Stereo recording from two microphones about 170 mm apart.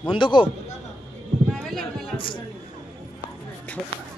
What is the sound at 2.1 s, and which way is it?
Speech, 30° left (ahead or behind).